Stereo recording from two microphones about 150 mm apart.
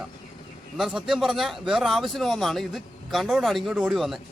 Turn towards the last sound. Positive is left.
turn(degrees=0)  # may be behind; listen again after turning